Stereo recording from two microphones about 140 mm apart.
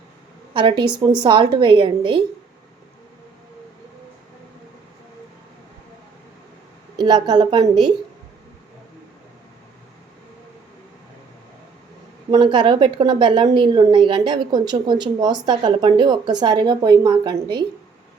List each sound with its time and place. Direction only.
0.5 s a woman's voice: 35° right (ahead or behind)
6.9 s a woman's voice: 30° right (ahead or behind)
12.3 s a woman's voice: 30° right (ahead or behind)